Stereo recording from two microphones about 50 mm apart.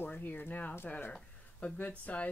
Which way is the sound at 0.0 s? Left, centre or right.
Left.